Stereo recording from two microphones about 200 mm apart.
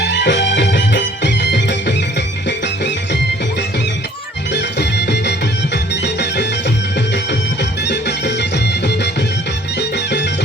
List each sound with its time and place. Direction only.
0.0 s music: 60° left (ahead or behind)
4.5 s music: 55° left (ahead or behind)
7.9 s music: 60° left (ahead or behind)